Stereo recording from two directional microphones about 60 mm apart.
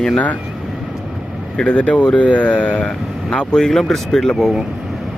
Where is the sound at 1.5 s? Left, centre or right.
Centre.